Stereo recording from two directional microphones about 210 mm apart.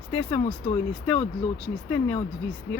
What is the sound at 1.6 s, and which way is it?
Speech, 10° left (ahead or behind).